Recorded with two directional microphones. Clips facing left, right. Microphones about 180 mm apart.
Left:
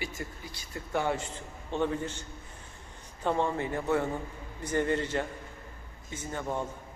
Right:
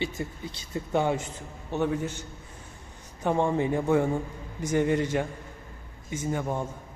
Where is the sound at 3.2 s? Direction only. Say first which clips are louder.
Right 4 dB; 15° right (ahead or behind).